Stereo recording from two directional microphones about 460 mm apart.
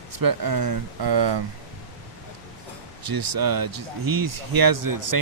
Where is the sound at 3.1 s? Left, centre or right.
Right.